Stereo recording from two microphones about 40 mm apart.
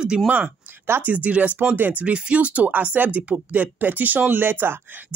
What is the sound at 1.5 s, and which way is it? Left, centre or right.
Speech, right.